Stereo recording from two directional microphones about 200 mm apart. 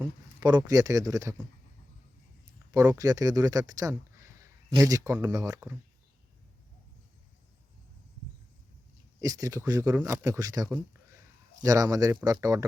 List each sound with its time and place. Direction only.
0.0 s speech: 20° right (ahead or behind)
3.0 s speech: 15° right (ahead or behind)
9.2 s speech: 15° right (ahead or behind)